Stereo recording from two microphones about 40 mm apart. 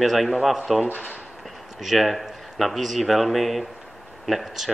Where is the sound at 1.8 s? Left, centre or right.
Centre.